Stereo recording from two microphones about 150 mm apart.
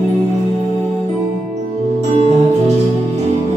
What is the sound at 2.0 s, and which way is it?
Music, 50° right (ahead or behind).